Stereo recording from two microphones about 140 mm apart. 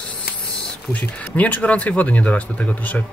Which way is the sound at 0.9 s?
10° left (ahead or behind).